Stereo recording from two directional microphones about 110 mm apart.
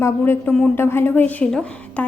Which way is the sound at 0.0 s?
20° left (ahead or behind).